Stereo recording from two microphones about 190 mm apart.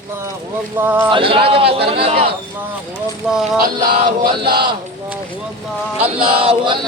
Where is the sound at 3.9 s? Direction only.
50° right (ahead or behind).